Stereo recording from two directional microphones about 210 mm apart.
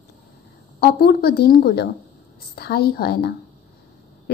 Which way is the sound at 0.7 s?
50° left (ahead or behind).